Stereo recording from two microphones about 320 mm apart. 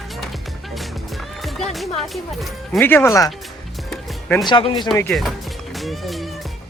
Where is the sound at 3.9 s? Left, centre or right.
Centre.